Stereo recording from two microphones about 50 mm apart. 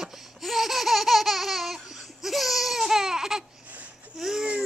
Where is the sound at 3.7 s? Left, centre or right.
Right.